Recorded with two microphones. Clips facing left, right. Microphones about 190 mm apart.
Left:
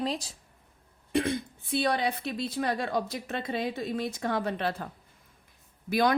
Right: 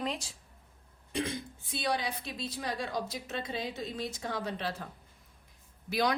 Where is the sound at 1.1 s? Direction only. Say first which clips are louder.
Left 7 dB; 60° left (ahead or behind).